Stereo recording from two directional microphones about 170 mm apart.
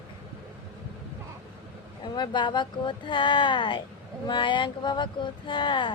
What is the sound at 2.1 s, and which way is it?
Speech, 25° left (ahead or behind).